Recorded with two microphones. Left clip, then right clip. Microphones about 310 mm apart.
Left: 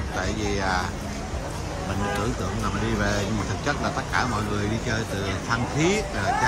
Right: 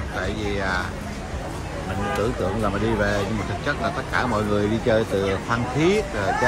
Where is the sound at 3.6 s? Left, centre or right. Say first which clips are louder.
Right 2 dB; centre.